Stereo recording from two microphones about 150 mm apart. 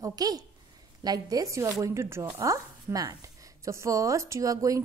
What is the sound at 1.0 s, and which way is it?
A woman's voice, 25° right (ahead or behind).